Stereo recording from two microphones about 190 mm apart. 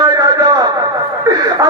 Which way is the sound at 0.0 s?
20° right (ahead or behind).